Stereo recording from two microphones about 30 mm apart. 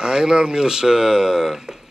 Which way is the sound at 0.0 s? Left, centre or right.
Right.